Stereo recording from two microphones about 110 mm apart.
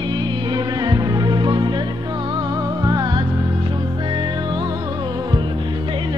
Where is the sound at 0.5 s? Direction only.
40° right (ahead or behind).